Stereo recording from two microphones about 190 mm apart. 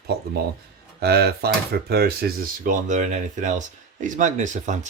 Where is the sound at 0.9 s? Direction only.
55° right (ahead or behind).